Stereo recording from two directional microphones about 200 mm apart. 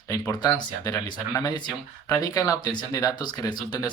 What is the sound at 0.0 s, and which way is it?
Speech, 20° left (ahead or behind).